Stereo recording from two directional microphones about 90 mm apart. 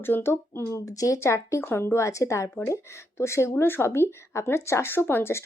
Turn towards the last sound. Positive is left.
turn(degrees=25)  # may be behind; listen again after turning